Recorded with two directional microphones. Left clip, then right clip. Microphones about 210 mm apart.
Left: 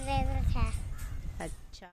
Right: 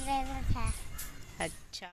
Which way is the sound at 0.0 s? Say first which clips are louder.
Even; 30° left (ahead or behind).